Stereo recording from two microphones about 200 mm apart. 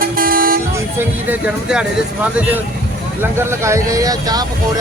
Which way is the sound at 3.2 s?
10° right (ahead or behind).